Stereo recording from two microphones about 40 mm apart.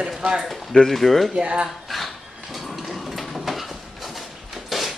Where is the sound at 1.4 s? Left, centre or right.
Right.